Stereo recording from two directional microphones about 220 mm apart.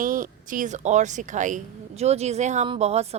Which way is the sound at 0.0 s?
40° right (ahead or behind).